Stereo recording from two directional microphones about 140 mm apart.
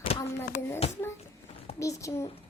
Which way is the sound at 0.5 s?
75° left (ahead or behind).